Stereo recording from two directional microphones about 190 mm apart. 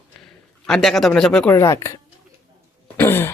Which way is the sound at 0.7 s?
Centre (ahead or behind).